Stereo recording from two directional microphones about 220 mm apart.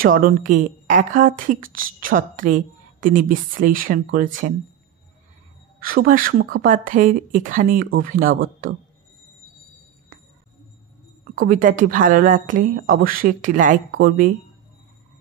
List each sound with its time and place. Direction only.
0.0 s a woman's voice: 40° right (ahead or behind)
5.8 s a woman's voice: 40° right (ahead or behind)
11.3 s a woman's voice: 40° right (ahead or behind)